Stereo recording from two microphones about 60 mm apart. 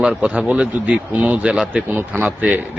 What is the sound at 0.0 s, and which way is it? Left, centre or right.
Speech, centre.